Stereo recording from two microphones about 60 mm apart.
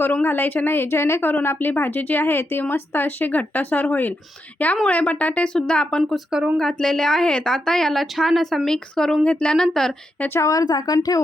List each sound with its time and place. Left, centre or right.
0.0 s speech: left
1.3 s a woman's voice: left; by 9.9 s centre
10.5 s speech: left